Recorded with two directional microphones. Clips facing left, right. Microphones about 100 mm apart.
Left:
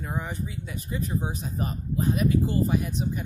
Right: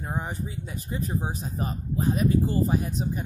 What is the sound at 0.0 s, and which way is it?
Speech, 30° right (ahead or behind).